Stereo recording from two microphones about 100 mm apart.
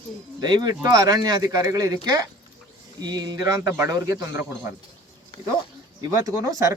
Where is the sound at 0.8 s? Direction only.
35° right (ahead or behind).